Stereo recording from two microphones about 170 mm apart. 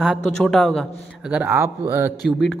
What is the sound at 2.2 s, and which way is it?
Speech, centre (ahead or behind).